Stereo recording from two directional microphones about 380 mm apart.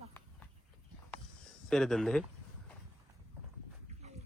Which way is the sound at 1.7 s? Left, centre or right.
Centre.